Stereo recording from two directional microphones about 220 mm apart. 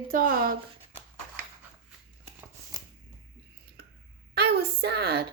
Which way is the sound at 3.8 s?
45° right (ahead or behind).